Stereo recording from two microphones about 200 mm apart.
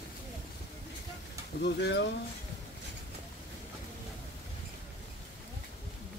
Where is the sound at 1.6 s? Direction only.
55° left (ahead or behind).